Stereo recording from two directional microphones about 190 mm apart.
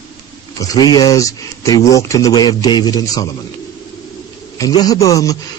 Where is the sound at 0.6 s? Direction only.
20° left (ahead or behind).